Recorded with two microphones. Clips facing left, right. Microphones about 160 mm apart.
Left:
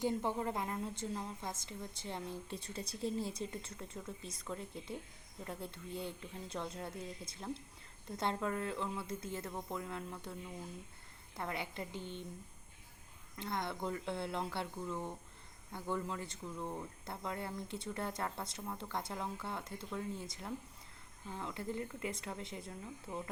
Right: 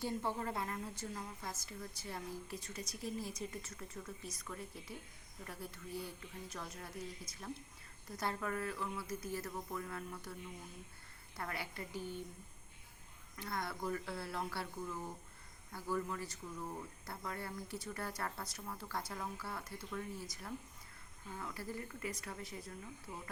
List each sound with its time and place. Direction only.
0.0 s a woman's voice: 20° left (ahead or behind)
11.3 s a woman's voice: 20° left (ahead or behind)
13.3 s a woman's voice: 20° left (ahead or behind)